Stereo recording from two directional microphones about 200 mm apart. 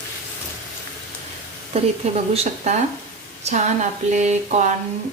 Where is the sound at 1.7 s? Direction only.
30° right (ahead or behind).